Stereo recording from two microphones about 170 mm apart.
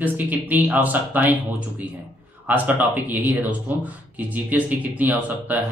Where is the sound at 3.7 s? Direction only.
10° right (ahead or behind).